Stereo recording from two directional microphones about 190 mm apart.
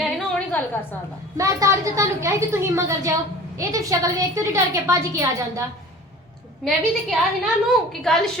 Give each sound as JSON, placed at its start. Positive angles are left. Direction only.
{"t": 0.5, "sound": "a woman's voice", "side_deg": 10}
{"t": 1.4, "sound": "a woman's voice", "side_deg": -15}
{"t": 6.7, "sound": "a woman's voice", "side_deg": 0}